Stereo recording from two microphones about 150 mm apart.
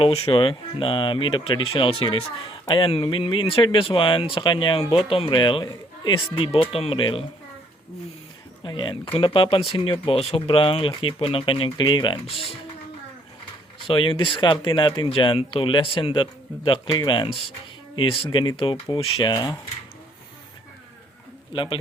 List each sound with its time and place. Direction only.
0.0 s speech: 40° left (ahead or behind)
8.6 s speech: 30° left (ahead or behind)
13.8 s speech: 35° left (ahead or behind)
21.5 s speech: 35° left (ahead or behind)